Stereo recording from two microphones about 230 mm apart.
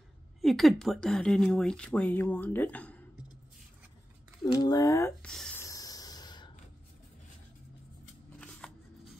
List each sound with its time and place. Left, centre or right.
0.4 s speech: centre
4.5 s speech: centre
5.3 s snort: centre
8.4 s scissors: centre